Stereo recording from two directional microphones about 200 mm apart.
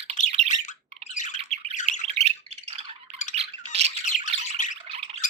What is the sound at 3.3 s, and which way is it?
Squawk, 30° right (ahead or behind).